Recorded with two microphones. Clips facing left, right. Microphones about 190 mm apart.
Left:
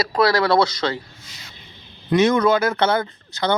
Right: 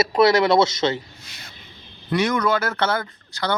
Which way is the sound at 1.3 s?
60° right (ahead or behind).